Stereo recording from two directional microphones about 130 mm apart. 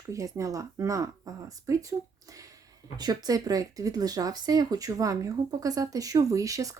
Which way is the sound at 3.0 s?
30° right (ahead or behind).